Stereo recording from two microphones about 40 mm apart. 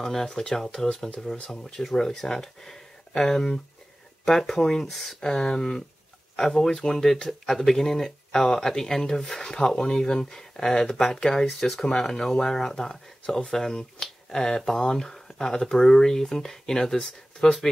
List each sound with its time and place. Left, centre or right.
0.0 s speech: centre
5.2 s speech: centre